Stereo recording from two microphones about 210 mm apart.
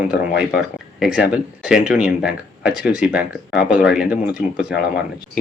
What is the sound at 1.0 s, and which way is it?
Speech, 5° right (ahead or behind).